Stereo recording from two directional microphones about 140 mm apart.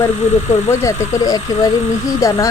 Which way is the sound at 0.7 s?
20° left (ahead or behind).